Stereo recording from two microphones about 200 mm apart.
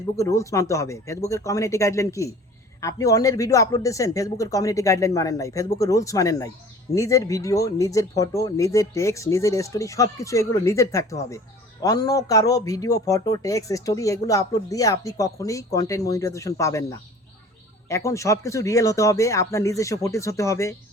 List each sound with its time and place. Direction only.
0.2 s speech: 15° left (ahead or behind)